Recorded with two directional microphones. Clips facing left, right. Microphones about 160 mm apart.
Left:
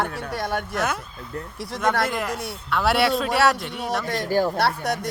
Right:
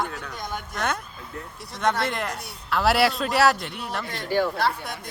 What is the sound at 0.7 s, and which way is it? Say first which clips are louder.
A man's voice: left 2 dB; 5° left (ahead or behind).